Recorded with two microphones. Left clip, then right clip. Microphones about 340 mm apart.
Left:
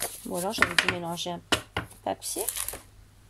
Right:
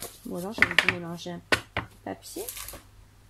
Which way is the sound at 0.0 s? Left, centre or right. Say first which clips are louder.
Left 5 dB; left.